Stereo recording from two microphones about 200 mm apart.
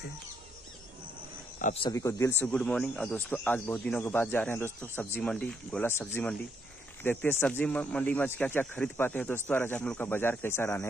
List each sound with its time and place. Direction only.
1.6 s speech: 35° left (ahead or behind)
1.9 s speech: 15° left (ahead or behind)